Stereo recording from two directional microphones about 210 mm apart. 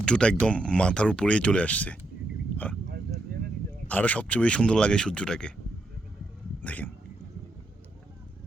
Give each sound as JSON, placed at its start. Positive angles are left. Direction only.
{"t": 0.0, "sound": "speech", "side_deg": 5}
{"t": 3.3, "sound": "a sound", "side_deg": -50}
{"t": 3.8, "sound": "speech", "side_deg": 5}
{"t": 6.6, "sound": "speech", "side_deg": 10}